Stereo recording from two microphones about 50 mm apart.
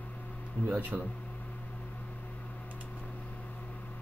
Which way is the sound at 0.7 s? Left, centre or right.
Right.